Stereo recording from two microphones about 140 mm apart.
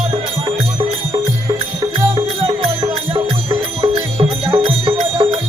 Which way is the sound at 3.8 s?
45° right (ahead or behind).